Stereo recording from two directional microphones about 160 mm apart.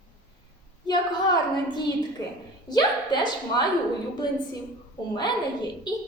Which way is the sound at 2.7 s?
25° left (ahead or behind).